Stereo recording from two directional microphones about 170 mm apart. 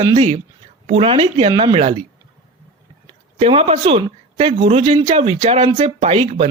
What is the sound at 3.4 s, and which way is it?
Speech, 35° right (ahead or behind).